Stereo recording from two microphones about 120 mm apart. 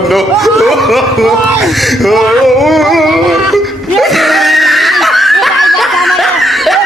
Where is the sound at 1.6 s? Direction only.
Centre (ahead or behind).